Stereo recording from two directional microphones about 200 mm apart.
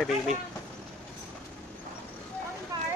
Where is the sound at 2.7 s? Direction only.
15° right (ahead or behind).